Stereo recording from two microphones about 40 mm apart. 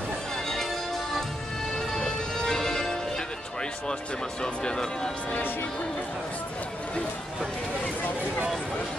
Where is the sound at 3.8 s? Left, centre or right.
Left.